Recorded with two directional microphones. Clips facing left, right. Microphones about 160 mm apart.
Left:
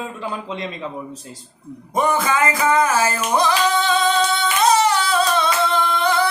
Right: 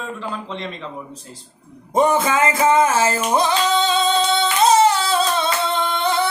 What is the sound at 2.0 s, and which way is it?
Singing, 25° right (ahead or behind).